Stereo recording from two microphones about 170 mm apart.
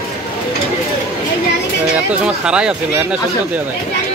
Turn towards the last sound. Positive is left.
turn(degrees=-5)  # may be behind; listen again after turning